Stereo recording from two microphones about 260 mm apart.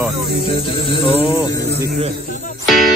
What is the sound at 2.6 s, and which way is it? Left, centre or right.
Music, centre.